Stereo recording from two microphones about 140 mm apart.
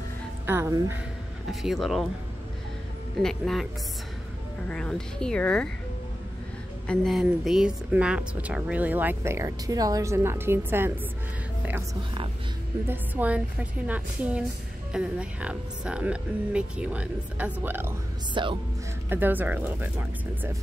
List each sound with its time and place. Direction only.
0.5 s speech: 20° right (ahead or behind)
1.5 s speech: centre (ahead or behind)
3.2 s speech: 5° left (ahead or behind)
4.6 s speech: 5° left (ahead or behind)
6.9 s speech: centre (ahead or behind); by 10.9 s 15° right (ahead or behind)
12.8 s speech: 15° right (ahead or behind)
18.3 s speech: 35° right (ahead or behind)
19.0 s speech: 15° right (ahead or behind)